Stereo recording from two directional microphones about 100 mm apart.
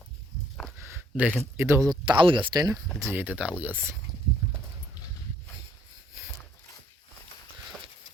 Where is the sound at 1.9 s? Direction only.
50° right (ahead or behind).